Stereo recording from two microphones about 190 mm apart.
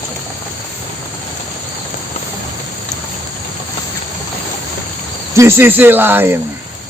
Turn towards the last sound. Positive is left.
turn(degrees=-10)  # may be behind; listen again after turning